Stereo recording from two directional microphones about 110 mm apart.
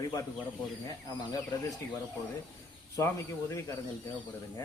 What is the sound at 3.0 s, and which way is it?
Speech, 25° left (ahead or behind).